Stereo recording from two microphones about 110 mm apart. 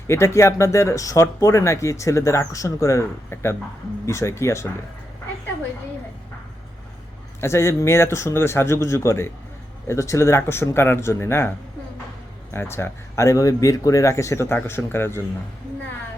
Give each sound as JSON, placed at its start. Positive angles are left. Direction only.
{"t": 0.1, "sound": "speech", "side_deg": 25}
{"t": 7.4, "sound": "speech", "side_deg": 25}
{"t": 12.5, "sound": "speech", "side_deg": 25}